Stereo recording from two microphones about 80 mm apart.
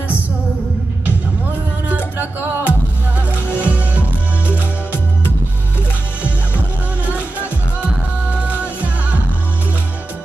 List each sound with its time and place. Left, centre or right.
1.9 s music: right
7.1 s music: centre